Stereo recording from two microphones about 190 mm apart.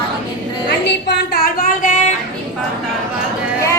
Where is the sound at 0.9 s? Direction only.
65° left (ahead or behind); by 2.0 s 45° left (ahead or behind).